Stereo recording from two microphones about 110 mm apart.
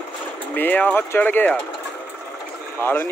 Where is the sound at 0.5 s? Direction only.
15° left (ahead or behind).